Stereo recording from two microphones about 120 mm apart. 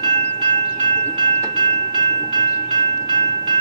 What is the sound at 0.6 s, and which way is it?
Train, 50° right (ahead or behind).